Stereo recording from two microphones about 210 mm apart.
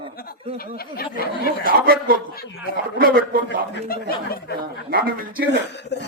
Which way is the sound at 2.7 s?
45° right (ahead or behind).